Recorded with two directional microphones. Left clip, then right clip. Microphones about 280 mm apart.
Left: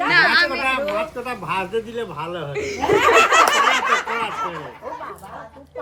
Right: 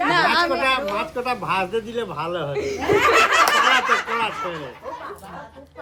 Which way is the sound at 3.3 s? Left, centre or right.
Left.